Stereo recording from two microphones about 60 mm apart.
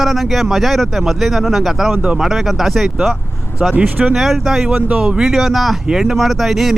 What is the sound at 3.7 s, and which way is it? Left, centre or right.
Speech, right.